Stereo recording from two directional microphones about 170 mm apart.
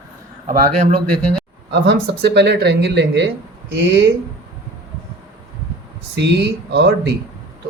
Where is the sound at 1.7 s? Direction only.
85° right.